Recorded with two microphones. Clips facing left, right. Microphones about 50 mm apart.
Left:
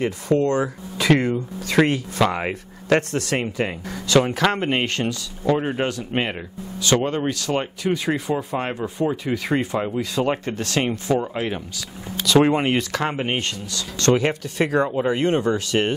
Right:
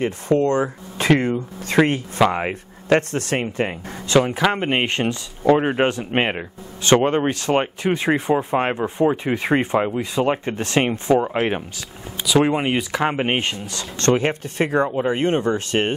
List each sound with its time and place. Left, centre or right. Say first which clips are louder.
0.0 s speech: right 1 dB; right
1.8 s speech: right 2 dB; centre
3.0 s speech: right 1 dB; right
4.4 s speech: right 1 dB; centre; by 9.8 s right
9.8 s speech: right 2 dB; centre
12.4 s speech: left 1 dB; centre
12.9 s speech: right 3 dB; centre
13.7 s speech: even; right
14.8 s speech: right 1 dB; centre
15.0 s speech: even; right